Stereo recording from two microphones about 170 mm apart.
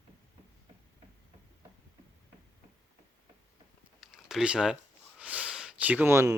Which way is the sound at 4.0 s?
5° right (ahead or behind).